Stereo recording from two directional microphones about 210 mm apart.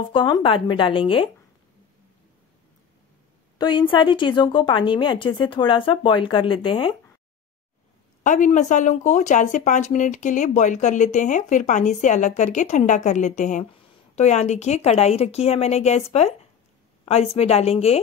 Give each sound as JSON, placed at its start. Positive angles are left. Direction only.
{"t": 0.0, "sound": "a woman's voice", "side_deg": 20}
{"t": 3.5, "sound": "a woman's voice", "side_deg": 20}
{"t": 8.2, "sound": "a woman's voice", "side_deg": 35}